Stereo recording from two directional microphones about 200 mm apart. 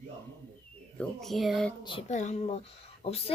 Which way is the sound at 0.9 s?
Centre (ahead or behind).